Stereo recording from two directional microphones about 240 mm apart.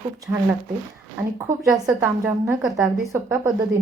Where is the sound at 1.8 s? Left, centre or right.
Centre.